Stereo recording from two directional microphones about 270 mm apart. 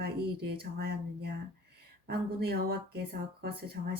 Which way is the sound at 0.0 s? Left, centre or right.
Right.